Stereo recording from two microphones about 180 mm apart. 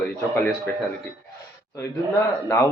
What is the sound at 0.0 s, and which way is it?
Speech, 5° left (ahead or behind).